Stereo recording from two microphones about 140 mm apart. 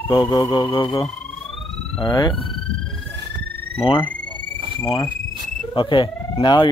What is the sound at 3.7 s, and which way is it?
Speech, 40° left (ahead or behind).